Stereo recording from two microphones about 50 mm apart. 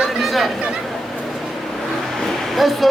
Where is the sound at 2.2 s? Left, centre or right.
Centre.